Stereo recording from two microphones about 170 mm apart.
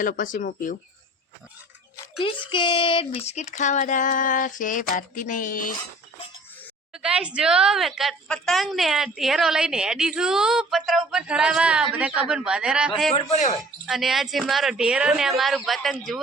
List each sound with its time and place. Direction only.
0.0 s speech: 55° left (ahead or behind)
2.1 s speech: 30° left (ahead or behind); by 5.7 s 50° left (ahead or behind)
6.9 s a woman's voice: 5° right (ahead or behind)